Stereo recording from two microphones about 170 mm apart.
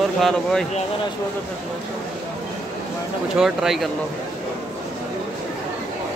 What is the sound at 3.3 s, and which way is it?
Speech, centre (ahead or behind).